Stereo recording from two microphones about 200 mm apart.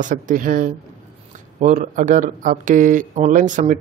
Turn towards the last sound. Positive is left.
turn(degrees=-40)  # may be behind; listen again after turning